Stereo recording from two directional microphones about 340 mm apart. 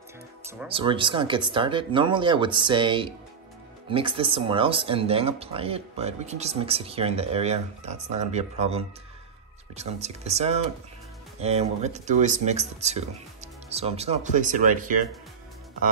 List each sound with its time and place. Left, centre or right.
0.5 s speech: centre